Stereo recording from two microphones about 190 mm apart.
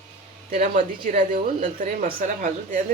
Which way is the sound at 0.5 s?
45° right (ahead or behind).